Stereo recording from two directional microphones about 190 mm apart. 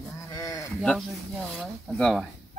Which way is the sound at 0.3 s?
20° left (ahead or behind).